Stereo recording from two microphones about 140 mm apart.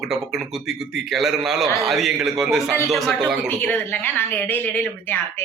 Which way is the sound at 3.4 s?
15° left (ahead or behind).